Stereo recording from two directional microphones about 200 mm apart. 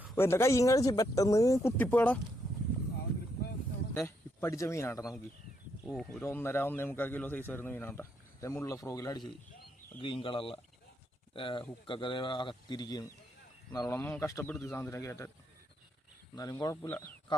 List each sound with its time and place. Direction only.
0.2 s speech: 15° left (ahead or behind)
3.9 s speech: 10° left (ahead or behind)
16.3 s speech: 20° left (ahead or behind)